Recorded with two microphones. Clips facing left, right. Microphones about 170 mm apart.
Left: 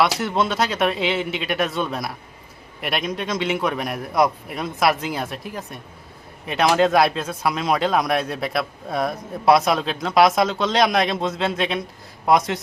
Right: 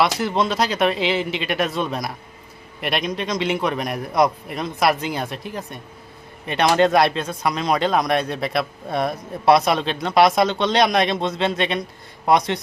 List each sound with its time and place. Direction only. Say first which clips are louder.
0.0 s speech: even; centre (ahead or behind)